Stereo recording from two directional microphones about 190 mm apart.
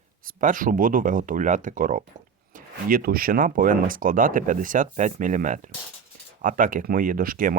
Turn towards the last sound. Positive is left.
turn(degrees=-45)  # may be behind; listen again after turning